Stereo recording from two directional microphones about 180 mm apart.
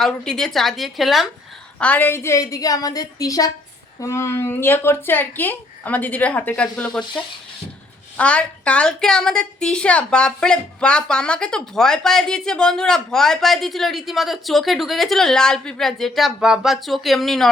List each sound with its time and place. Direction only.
0.0 s a woman's voice: 5° left (ahead or behind)
8.1 s a woman's voice: 5° left (ahead or behind)